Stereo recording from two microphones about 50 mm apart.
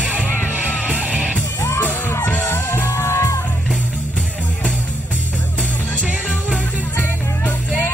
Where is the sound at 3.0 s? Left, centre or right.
Left.